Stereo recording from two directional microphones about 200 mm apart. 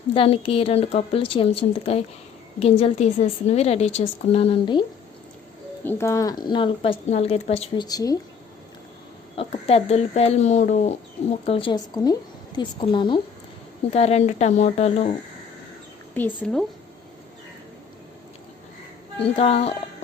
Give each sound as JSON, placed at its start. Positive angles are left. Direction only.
{"t": 0.1, "sound": "a woman's voice", "side_deg": 25}
{"t": 5.8, "sound": "a woman's voice", "side_deg": 10}
{"t": 7.9, "sound": "speech", "side_deg": 20}
{"t": 9.3, "sound": "a woman's voice", "side_deg": 30}
{"t": 16.1, "sound": "speech", "side_deg": 10}
{"t": 19.2, "sound": "a woman's voice", "side_deg": 30}